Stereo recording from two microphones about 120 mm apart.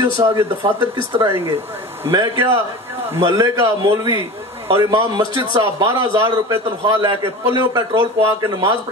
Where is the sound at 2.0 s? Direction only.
25° right (ahead or behind).